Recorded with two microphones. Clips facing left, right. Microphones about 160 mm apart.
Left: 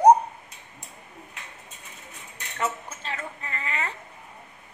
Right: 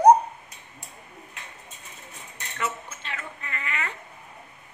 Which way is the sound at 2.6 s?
40° left (ahead or behind).